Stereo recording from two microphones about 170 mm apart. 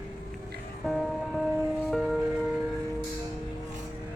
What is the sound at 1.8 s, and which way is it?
Music, centre (ahead or behind).